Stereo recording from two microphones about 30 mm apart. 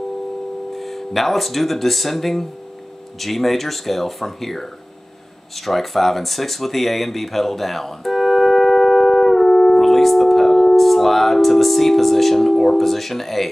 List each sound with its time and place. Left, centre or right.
0.7 s speech: centre
5.7 s speech: centre
9.5 s music: left
9.8 s music: centre
10.8 s speech: centre